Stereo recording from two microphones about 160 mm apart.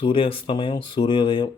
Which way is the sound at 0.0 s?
35° left (ahead or behind).